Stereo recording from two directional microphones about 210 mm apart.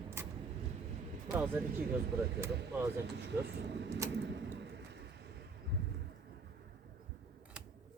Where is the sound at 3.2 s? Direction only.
55° right (ahead or behind).